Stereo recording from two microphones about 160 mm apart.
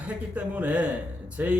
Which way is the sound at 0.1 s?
10° right (ahead or behind).